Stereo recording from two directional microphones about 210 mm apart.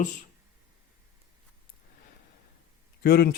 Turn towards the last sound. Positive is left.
turn(degrees=50)  # may be behind; listen again after turning